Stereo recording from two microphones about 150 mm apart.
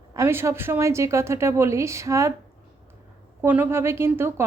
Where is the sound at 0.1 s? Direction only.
20° right (ahead or behind).